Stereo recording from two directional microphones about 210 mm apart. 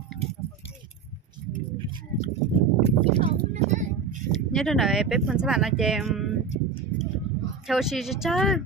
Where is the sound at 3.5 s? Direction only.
35° right (ahead or behind).